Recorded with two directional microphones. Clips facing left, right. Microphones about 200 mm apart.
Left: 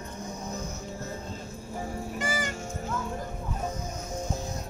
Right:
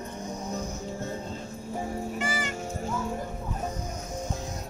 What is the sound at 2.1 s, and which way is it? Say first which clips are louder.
Music: even; 40° left (ahead or behind).